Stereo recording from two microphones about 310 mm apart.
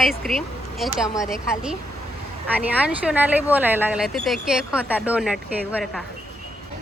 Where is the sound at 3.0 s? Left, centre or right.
Centre.